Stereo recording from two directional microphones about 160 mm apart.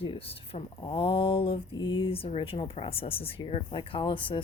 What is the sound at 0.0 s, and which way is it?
Speech, 35° left (ahead or behind).